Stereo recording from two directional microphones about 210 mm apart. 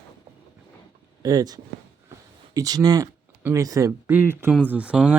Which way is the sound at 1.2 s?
15° right (ahead or behind).